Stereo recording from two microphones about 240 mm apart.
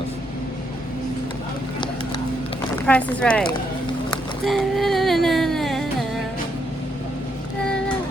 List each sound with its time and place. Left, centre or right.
2.7 s speech: centre
4.4 s music: centre